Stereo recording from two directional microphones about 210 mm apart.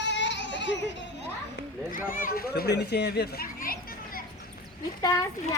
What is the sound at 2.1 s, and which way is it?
A child's voice, 45° left (ahead or behind).